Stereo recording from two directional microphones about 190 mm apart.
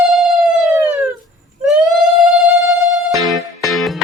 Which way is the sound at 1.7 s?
Centre (ahead or behind).